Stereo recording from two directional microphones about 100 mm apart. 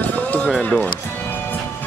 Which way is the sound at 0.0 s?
15° left (ahead or behind).